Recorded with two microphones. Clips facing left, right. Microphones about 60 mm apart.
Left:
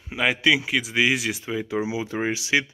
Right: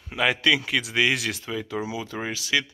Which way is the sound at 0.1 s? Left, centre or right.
Centre.